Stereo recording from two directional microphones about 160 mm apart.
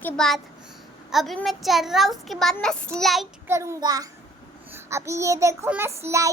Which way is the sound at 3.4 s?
20° right (ahead or behind).